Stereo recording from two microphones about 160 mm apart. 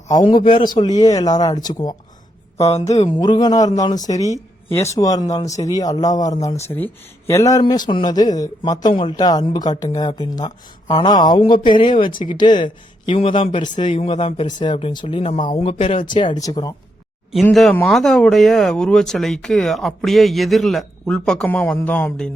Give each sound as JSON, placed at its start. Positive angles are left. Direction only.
{"t": 0.1, "sound": "a man's voice", "side_deg": 25}
{"t": 2.6, "sound": "speech", "side_deg": 45}
{"t": 3.2, "sound": "a man's voice", "side_deg": 25}
{"t": 17.4, "sound": "speech", "side_deg": 5}